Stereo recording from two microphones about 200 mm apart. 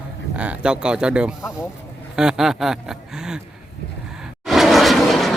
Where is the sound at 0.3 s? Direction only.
5° right (ahead or behind).